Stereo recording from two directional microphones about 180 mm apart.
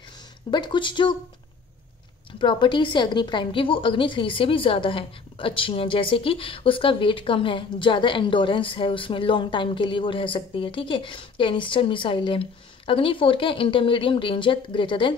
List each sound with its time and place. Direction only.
0.5 s a woman's voice: 25° left (ahead or behind)
2.3 s a woman's voice: 25° left (ahead or behind)